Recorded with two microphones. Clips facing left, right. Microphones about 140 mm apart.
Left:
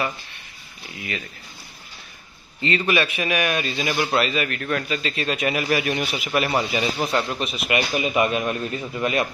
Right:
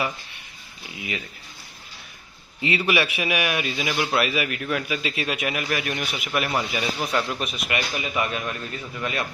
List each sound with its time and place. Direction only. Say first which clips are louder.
2.6 s a man's voice: left 1 dB; 15° right (ahead or behind); by 8.0 s 10° left (ahead or behind)
8.0 s a man's voice: left 6 dB; 20° left (ahead or behind)